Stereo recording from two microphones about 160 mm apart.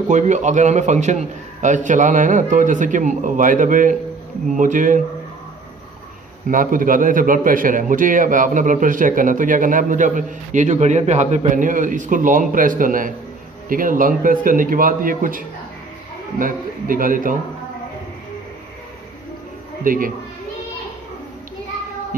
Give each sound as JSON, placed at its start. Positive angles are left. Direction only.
{"t": 0.1, "sound": "a man's voice", "side_deg": -50}
{"t": 6.5, "sound": "a man's voice", "side_deg": -55}
{"t": 19.8, "sound": "speech", "side_deg": -60}